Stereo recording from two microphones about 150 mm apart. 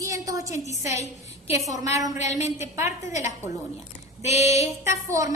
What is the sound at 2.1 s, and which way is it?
A woman's voice, 50° left (ahead or behind).